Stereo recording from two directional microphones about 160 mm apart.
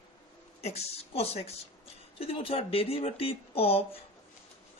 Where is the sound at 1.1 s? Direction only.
40° left (ahead or behind).